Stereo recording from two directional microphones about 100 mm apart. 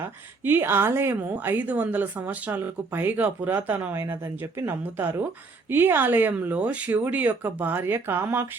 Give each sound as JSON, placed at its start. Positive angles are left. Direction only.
{"t": 0.0, "sound": "a woman's voice", "side_deg": -20}